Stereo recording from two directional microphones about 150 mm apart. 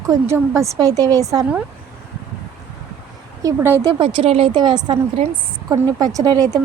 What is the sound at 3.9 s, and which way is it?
A woman's voice, 35° right (ahead or behind).